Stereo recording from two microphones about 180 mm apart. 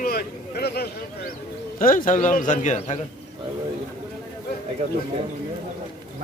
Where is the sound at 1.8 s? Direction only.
50° left (ahead or behind).